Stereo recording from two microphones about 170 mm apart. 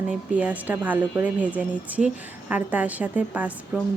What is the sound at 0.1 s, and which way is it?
A woman's voice, 10° right (ahead or behind).